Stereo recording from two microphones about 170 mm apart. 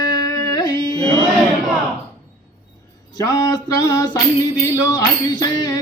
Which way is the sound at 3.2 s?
25° left (ahead or behind).